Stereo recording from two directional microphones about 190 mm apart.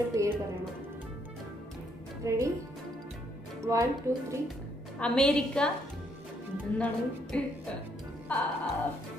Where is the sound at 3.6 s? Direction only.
15° right (ahead or behind).